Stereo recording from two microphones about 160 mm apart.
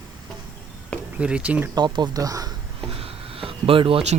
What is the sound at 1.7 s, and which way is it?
Speech, 25° right (ahead or behind).